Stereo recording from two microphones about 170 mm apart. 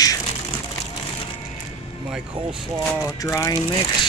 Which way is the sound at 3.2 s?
15° left (ahead or behind).